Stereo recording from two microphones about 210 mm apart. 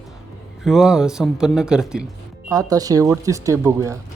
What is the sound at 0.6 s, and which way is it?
Speech, centre (ahead or behind).